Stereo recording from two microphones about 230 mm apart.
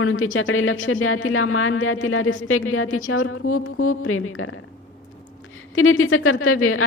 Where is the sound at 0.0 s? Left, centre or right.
Left.